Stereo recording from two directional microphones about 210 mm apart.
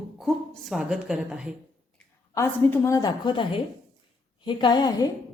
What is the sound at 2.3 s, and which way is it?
A woman's voice, 10° left (ahead or behind).